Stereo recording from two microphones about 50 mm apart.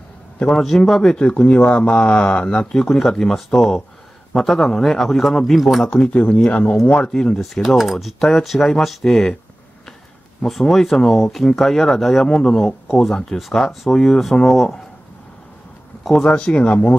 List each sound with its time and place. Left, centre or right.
0.5 s speech: centre
1.1 s speech: left; by 5.9 s centre
5.9 s speech: left
7.6 s speech: centre
10.4 s speech: centre
16.0 s speech: centre
16.3 s speech: left